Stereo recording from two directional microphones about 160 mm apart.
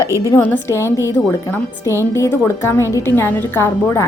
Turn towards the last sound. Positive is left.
turn(degrees=15)  # may be behind; listen again after turning